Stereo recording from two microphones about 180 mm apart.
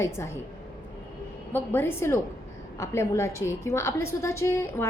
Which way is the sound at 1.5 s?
10° left (ahead or behind).